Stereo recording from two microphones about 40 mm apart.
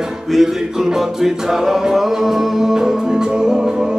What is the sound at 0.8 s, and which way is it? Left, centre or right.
Music, centre.